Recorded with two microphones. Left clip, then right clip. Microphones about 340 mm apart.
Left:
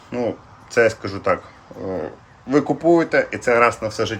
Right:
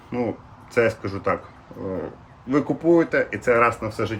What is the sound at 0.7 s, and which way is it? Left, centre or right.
Speech, centre.